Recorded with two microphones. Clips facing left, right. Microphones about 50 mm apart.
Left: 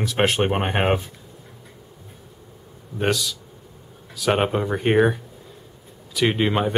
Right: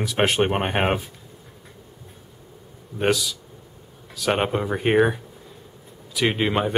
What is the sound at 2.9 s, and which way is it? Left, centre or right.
Speech, centre.